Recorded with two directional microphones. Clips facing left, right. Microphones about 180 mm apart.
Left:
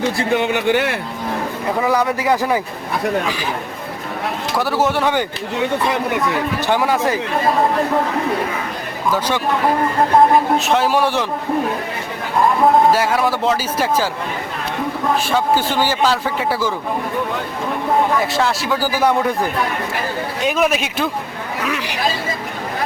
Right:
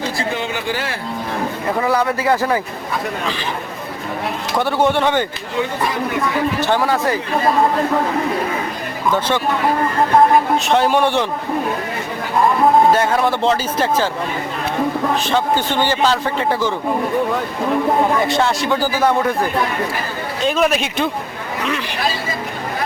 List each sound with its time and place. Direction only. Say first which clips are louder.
0.2 s speech: left 5 dB; 60° left (ahead or behind)
1.8 s a man's voice: even; 15° left (ahead or behind)
4.5 s a man's voice: right 2 dB; 5° left (ahead or behind)
6.6 s a man's voice: left 2 dB; 15° left (ahead or behind)
9.1 s a man's voice: right 1 dB; 10° left (ahead or behind)
10.7 s a man's voice: right 1 dB; centre (ahead or behind)
12.9 s a man's voice: right 1 dB; 5° left (ahead or behind)
15.2 s a man's voice: left 1 dB; 10° left (ahead or behind)
18.2 s a man's voice: right 2 dB; centre (ahead or behind)